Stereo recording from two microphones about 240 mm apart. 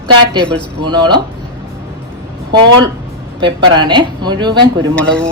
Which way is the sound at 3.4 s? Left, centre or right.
Centre.